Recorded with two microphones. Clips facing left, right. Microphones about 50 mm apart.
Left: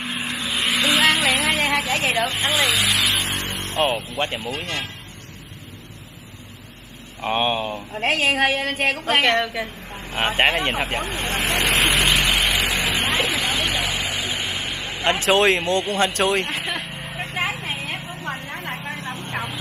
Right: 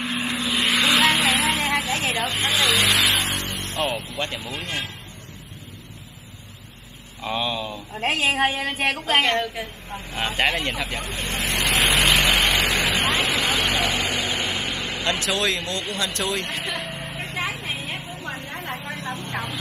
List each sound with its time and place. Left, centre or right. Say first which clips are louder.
0.0 s vehicle: right 1 dB; centre
1.6 s vehicle: left 2 dB; left
2.4 s speech: even; centre
2.7 s vehicle: right 1 dB; centre
3.3 s vehicle: left 1 dB; left
7.2 s a woman's voice: left 4 dB; left
9.4 s a woman's voice: left 3 dB; left
10.1 s speech: left 4 dB; left
11.9 s vehicle: even; centre
13.2 s vehicle: even; centre
15.0 s speech: left 7 dB; left
16.8 s vehicle: right 1 dB; centre
17.2 s vehicle: left 4 dB; left